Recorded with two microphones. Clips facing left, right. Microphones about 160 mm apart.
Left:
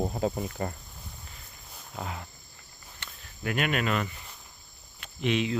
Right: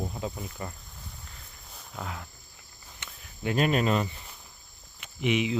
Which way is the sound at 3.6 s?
30° right (ahead or behind).